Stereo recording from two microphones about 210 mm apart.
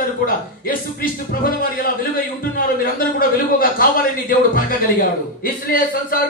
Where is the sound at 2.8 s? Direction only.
45° left (ahead or behind).